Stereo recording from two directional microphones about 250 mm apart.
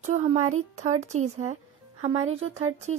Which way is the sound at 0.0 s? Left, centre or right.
Right.